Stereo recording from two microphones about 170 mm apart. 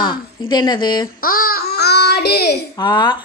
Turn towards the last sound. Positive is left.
turn(degrees=25)  # may be behind; listen again after turning